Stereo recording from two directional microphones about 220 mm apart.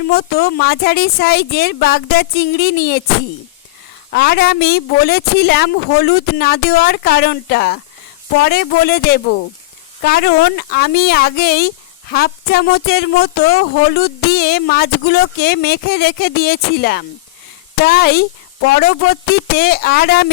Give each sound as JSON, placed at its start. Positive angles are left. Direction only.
{"t": 0.1, "sound": "speech", "side_deg": 45}
{"t": 4.1, "sound": "speech", "side_deg": 45}